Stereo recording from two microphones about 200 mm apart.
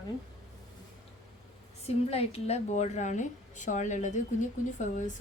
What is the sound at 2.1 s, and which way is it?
A woman's voice, 30° left (ahead or behind).